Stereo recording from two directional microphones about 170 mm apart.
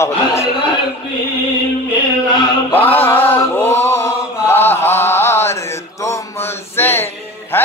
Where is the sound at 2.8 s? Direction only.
10° left (ahead or behind).